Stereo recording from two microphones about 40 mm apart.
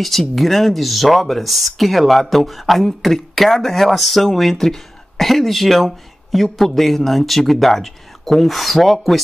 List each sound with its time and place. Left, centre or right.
0.4 s speech: centre